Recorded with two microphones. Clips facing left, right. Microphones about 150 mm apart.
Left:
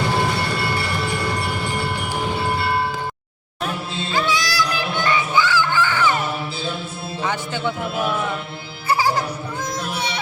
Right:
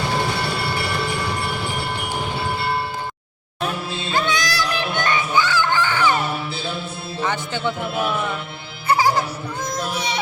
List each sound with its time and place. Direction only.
4.3 s child singing: 20° right (ahead or behind)
5.7 s music: 15° right (ahead or behind)
7.2 s music: 5° left (ahead or behind)
8.9 s music: 15° right (ahead or behind)